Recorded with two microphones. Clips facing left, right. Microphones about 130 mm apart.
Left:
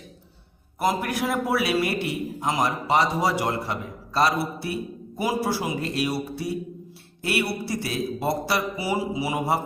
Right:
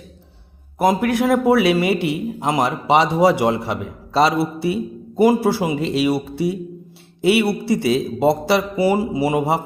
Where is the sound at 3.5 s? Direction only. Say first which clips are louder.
Right 7 dB; 85° right.